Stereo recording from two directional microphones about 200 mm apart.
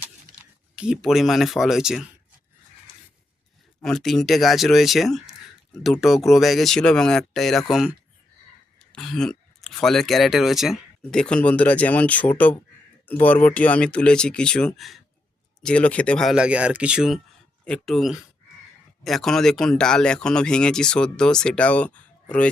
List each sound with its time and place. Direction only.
0.8 s speech: centre (ahead or behind)
3.8 s speech: centre (ahead or behind)